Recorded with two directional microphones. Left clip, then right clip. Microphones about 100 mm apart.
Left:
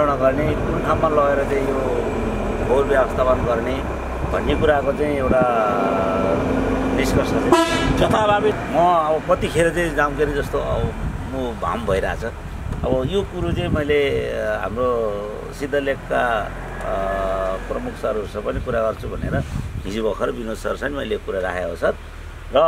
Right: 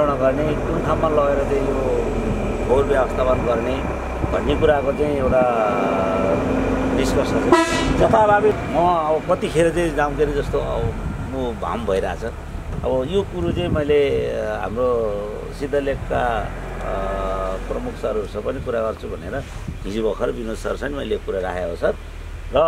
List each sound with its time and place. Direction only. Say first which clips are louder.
0.0 s speech: even; 5° left (ahead or behind)
6.4 s speech: even; 10° right (ahead or behind)
8.0 s speech: right 3 dB; 25° left (ahead or behind)
8.7 s speech: left 5 dB; 5° left (ahead or behind)
18.7 s speech: left 1 dB; 5° left (ahead or behind)
19.9 s speech: even; centre (ahead or behind)